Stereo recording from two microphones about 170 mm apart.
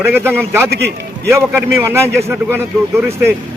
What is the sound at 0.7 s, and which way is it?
Speech, 70° right (ahead or behind).